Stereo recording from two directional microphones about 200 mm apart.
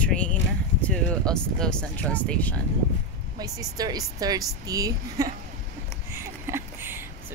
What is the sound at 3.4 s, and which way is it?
Speech, 20° right (ahead or behind).